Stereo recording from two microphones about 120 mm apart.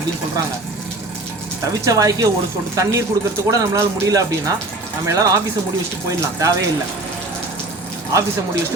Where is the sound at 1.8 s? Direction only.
30° right (ahead or behind).